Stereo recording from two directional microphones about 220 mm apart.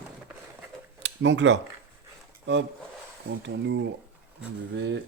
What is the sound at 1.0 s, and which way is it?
Speech, 55° right (ahead or behind).